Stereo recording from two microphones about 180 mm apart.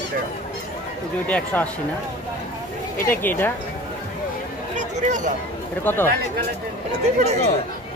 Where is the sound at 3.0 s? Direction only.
10° left (ahead or behind).